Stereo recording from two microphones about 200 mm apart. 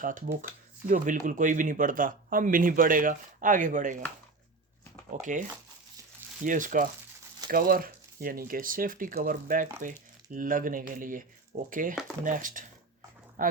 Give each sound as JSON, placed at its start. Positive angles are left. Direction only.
{"t": 0.0, "sound": "speech", "side_deg": -40}
{"t": 5.2, "sound": "speech", "side_deg": -40}
{"t": 13.4, "sound": "a sound", "side_deg": -45}